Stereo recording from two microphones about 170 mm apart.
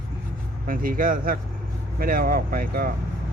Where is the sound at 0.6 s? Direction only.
55° right (ahead or behind).